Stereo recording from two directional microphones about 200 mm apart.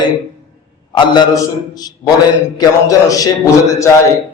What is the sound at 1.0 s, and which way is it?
Speech, 20° left (ahead or behind).